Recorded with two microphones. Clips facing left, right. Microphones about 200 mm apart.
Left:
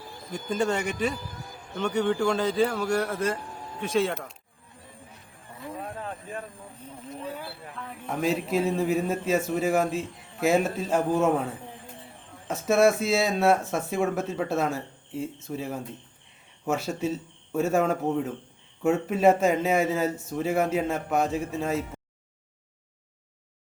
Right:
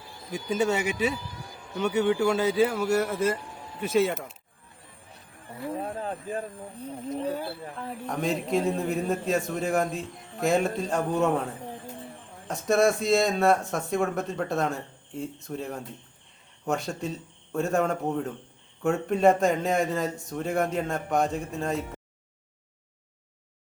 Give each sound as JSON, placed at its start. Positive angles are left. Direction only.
{"t": 0.5, "sound": "a man's voice", "side_deg": -5}
{"t": 5.6, "sound": "speech", "side_deg": -30}
{"t": 8.0, "sound": "speech", "side_deg": 0}
{"t": 12.5, "sound": "speech", "side_deg": 5}